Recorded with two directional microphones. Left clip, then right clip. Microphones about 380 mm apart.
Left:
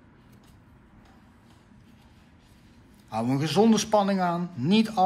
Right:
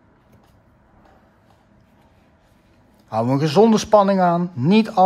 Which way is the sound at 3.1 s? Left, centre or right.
Right.